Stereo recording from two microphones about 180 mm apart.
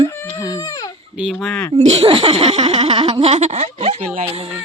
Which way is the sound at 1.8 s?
35° right (ahead or behind).